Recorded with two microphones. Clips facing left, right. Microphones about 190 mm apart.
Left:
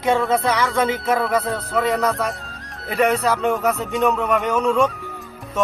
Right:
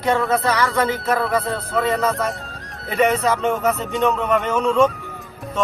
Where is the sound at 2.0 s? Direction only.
Centre (ahead or behind).